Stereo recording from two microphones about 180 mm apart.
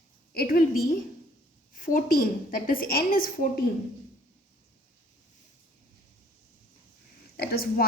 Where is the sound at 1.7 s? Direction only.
50° left (ahead or behind).